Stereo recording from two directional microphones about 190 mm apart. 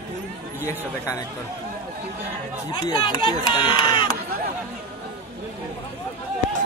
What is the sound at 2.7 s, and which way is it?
Speech, 20° left (ahead or behind).